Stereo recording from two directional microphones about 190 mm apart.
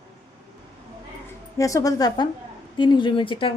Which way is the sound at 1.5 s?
15° left (ahead or behind).